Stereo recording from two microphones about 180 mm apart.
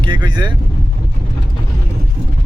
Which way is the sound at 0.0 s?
25° right (ahead or behind).